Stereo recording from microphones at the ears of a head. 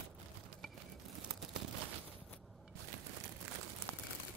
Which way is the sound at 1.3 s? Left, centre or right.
Right.